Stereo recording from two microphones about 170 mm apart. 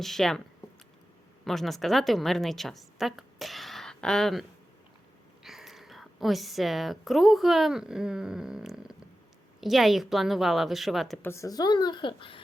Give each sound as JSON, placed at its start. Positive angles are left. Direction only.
{"t": 0.0, "sound": "a woman's voice", "side_deg": 0}
{"t": 1.5, "sound": "a woman's voice", "side_deg": 0}
{"t": 11.2, "sound": "speech", "side_deg": 15}